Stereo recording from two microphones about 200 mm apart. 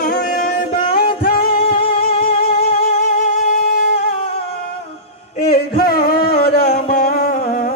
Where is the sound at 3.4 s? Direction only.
45° left (ahead or behind).